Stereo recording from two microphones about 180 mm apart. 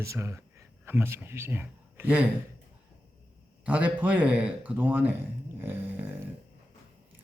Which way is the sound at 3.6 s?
5° right (ahead or behind).